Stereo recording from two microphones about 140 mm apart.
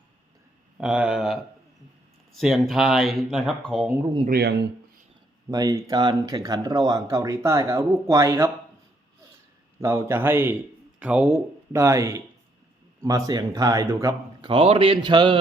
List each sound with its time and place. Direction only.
0.8 s speech: 5° right (ahead or behind)
5.5 s speech: 25° right (ahead or behind)
9.8 s speech: 20° right (ahead or behind)
11.7 s speech: 20° right (ahead or behind); by 15.4 s 35° right (ahead or behind)